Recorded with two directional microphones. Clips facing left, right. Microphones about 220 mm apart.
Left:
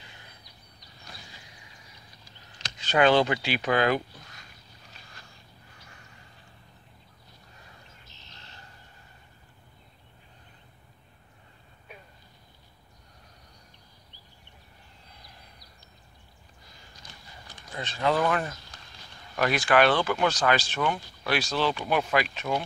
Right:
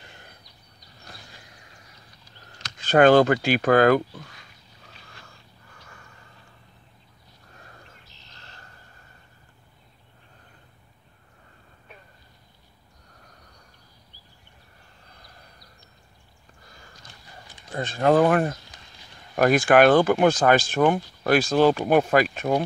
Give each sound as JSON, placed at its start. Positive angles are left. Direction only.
{"t": 0.0, "sound": "a sound", "side_deg": -50}
{"t": 2.8, "sound": "speech", "side_deg": -50}
{"t": 17.7, "sound": "speech", "side_deg": -50}